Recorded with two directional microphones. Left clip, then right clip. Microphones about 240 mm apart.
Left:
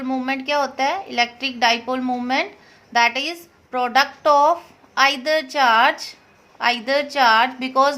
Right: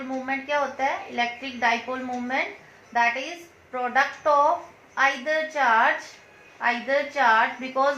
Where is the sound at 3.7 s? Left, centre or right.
Left.